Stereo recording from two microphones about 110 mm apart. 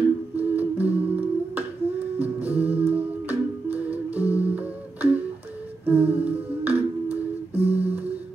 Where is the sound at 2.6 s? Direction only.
15° right (ahead or behind).